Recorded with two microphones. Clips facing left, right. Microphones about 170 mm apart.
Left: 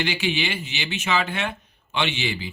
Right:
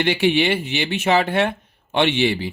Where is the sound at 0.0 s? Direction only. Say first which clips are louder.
Right 8 dB; 60° right (ahead or behind).